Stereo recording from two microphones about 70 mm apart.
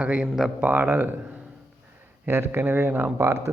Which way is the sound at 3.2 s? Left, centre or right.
Right.